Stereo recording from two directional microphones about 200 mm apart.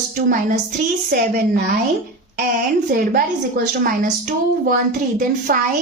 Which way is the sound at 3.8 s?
45° right (ahead or behind).